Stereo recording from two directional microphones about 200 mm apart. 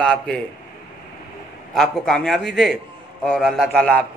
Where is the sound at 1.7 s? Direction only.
Centre (ahead or behind).